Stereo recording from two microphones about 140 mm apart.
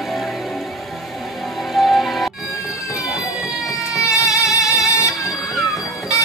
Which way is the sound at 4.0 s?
25° left (ahead or behind).